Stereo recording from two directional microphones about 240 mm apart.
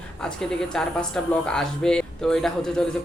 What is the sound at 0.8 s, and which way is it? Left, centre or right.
A man's voice, centre.